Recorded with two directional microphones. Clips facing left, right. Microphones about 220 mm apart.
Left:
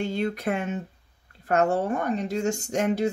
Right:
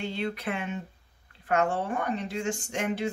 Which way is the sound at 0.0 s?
45° left (ahead or behind).